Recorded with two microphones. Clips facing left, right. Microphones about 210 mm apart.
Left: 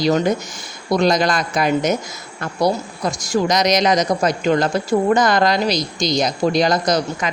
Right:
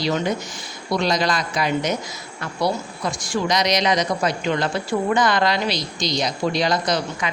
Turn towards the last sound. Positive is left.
turn(degrees=45)  # may be behind; listen again after turning